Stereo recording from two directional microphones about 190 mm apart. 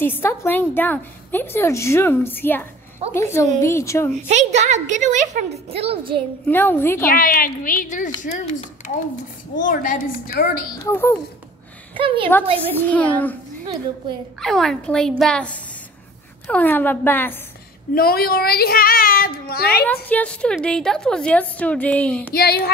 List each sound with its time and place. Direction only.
0.0 s a woman's voice: 10° left (ahead or behind)
4.3 s a woman's voice: 40° right (ahead or behind)
6.4 s a woman's voice: 10° left (ahead or behind)
7.1 s a woman's voice: 50° left (ahead or behind)
10.8 s a woman's voice: 15° left (ahead or behind)
11.9 s a woman's voice: 30° right (ahead or behind)
12.7 s a woman's voice: 10° left (ahead or behind)
14.4 s a woman's voice: centre (ahead or behind)
17.9 s a child's voice: 55° left (ahead or behind)
19.8 s a woman's voice: 10° left (ahead or behind)
22.3 s speech: 55° left (ahead or behind)